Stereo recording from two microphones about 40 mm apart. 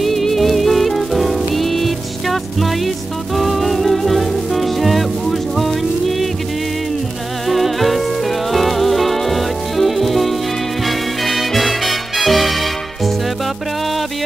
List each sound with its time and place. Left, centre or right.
0.0 s music: centre
7.4 s music: centre